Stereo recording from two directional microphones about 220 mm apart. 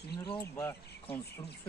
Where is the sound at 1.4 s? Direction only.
25° left (ahead or behind).